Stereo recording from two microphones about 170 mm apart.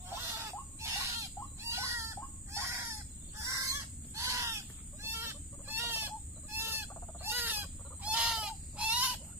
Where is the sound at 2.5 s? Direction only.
15° right (ahead or behind).